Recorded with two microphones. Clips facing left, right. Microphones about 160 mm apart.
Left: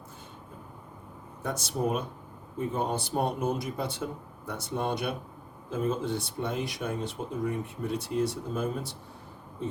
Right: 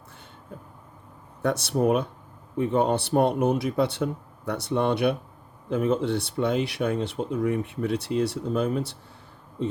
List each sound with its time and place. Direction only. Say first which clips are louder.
1.4 s speech: right 7 dB; 65° right (ahead or behind)